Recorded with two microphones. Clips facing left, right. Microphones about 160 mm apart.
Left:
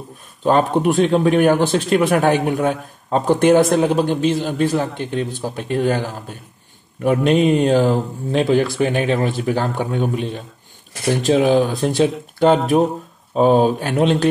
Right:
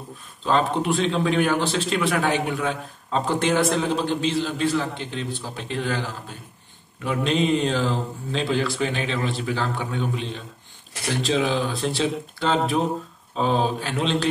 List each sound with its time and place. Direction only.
0.4 s a man's voice: 50° left (ahead or behind)